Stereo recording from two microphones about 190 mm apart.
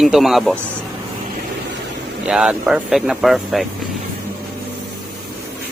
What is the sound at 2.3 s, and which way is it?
Speech, 5° right (ahead or behind).